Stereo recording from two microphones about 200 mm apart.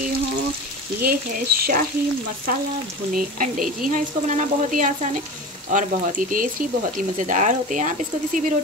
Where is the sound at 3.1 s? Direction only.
45° right (ahead or behind).